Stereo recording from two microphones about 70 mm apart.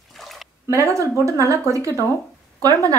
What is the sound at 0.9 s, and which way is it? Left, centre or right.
A woman's voice, right.